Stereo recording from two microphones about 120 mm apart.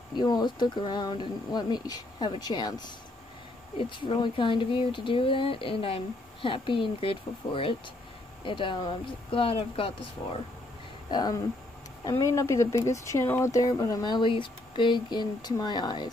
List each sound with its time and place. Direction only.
0.1 s speech: 35° left (ahead or behind)
11.1 s speech: 35° left (ahead or behind)